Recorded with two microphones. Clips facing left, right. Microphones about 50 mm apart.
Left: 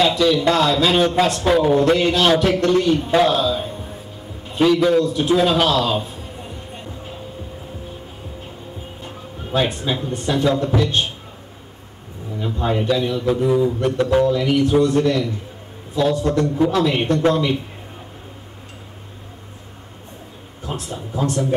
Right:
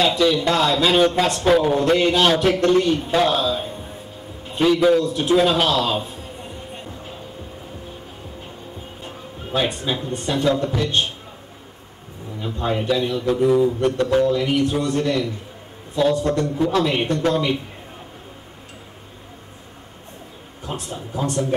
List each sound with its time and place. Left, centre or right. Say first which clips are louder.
0.0 s a man's voice: left 2 dB; centre
4.5 s a sound: even; centre
9.0 s a man's voice: even; centre
12.4 s a man's voice: left 2 dB; centre
20.9 s a man's voice: left 2 dB; centre